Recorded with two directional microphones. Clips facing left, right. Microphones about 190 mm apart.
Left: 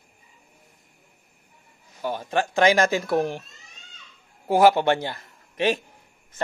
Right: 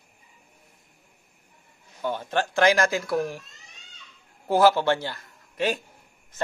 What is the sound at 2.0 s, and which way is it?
Speech, 10° left (ahead or behind).